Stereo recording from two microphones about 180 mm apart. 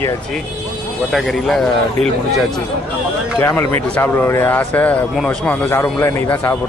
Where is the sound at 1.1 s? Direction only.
Centre (ahead or behind).